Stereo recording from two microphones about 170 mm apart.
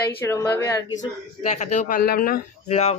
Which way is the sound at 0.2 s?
10° left (ahead or behind).